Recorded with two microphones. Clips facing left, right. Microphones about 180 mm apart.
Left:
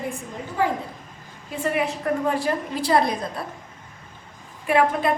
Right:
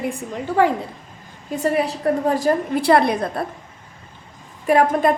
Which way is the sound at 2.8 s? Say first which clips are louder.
Right 4 dB; 65° right (ahead or behind).